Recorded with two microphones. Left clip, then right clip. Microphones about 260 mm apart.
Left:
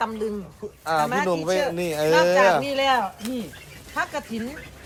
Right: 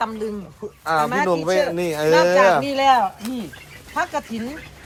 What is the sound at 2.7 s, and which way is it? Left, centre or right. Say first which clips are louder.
Speech: right 5 dB; centre.